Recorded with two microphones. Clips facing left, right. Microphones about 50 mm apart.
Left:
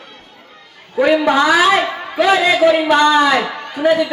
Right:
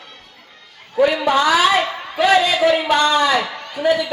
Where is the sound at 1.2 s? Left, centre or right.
Left.